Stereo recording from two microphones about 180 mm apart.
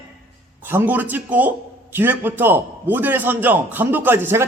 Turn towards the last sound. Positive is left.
turn(degrees=-10)  # may be behind; listen again after turning